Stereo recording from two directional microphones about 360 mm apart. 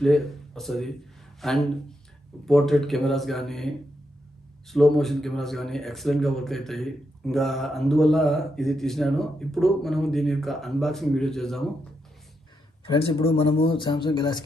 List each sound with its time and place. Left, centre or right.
0.0 s speech: centre
12.8 s speech: centre